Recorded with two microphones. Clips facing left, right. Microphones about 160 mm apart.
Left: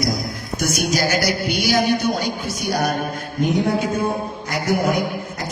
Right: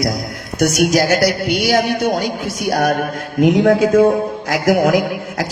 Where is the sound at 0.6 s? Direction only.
80° right.